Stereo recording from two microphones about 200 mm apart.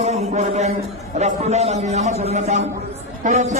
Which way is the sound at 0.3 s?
35° right (ahead or behind).